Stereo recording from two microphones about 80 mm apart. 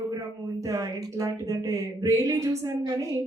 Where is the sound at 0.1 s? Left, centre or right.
Right.